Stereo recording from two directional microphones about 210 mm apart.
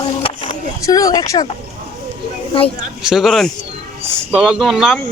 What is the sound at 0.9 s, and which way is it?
Speech, 15° left (ahead or behind).